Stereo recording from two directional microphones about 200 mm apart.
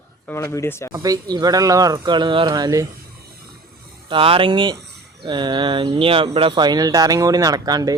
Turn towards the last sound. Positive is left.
turn(degrees=-20)  # may be behind; listen again after turning